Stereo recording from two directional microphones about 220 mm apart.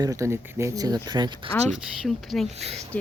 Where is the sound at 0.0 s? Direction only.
15° right (ahead or behind).